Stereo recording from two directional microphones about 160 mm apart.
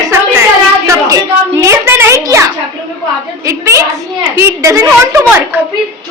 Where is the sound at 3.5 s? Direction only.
20° right (ahead or behind).